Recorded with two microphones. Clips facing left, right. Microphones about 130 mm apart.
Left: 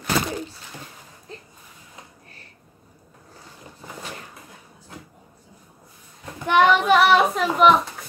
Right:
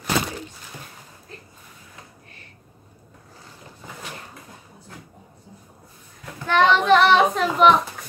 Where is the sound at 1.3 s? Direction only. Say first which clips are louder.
Left 3 dB; 25° left (ahead or behind).